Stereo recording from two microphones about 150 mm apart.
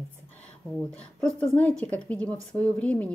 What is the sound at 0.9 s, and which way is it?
A woman's voice, 5° left (ahead or behind).